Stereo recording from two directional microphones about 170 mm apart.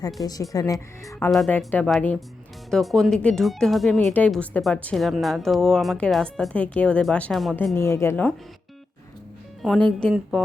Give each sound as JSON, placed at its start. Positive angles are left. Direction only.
{"t": 0.2, "sound": "speech", "side_deg": 20}
{"t": 1.3, "sound": "speech", "side_deg": 0}
{"t": 9.6, "sound": "speech", "side_deg": 5}